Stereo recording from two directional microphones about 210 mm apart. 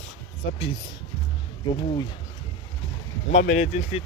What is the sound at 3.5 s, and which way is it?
Speech, 30° left (ahead or behind).